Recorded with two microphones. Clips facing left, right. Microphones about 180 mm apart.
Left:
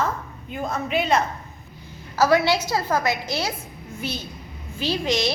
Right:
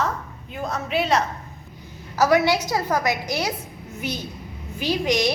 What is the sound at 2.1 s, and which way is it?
A woman's voice, 20° right (ahead or behind).